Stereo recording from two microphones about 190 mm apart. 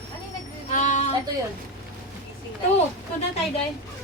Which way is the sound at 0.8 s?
40° left (ahead or behind).